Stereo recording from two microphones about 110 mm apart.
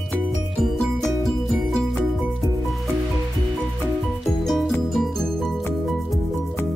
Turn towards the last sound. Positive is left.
turn(degrees=0)  # may be behind; listen again after turning